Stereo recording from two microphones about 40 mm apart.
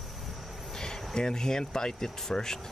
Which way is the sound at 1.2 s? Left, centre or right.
Centre.